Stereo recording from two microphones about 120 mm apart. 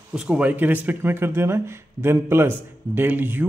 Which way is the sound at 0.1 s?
10° right (ahead or behind).